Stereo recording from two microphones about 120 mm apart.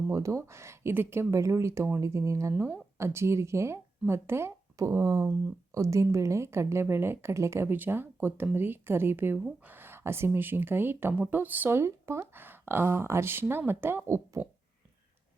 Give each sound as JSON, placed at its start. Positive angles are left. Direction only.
{"t": 0.1, "sound": "speech", "side_deg": -25}